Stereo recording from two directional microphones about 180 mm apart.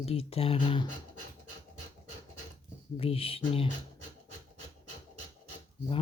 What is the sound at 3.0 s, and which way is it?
Speech, 30° left (ahead or behind).